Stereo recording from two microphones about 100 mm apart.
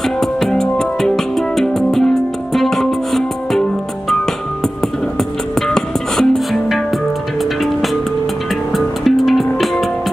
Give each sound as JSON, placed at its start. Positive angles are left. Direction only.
{"t": 0.2, "sound": "music", "side_deg": 5}
{"t": 5.7, "sound": "music", "side_deg": 5}
{"t": 8.7, "sound": "music", "side_deg": 0}